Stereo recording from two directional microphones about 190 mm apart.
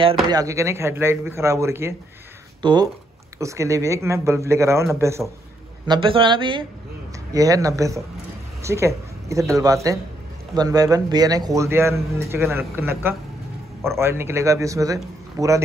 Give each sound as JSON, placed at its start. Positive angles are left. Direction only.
{"t": 0.0, "sound": "speech", "side_deg": -25}
{"t": 5.9, "sound": "speech", "side_deg": -25}